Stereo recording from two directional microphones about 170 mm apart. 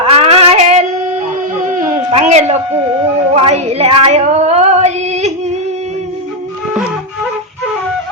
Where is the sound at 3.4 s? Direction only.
35° right (ahead or behind).